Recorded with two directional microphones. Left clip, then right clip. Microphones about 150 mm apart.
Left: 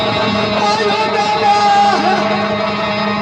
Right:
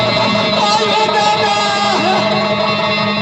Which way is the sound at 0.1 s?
45° right (ahead or behind).